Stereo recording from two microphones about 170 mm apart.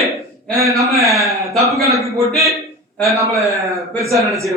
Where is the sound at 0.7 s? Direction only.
Centre (ahead or behind).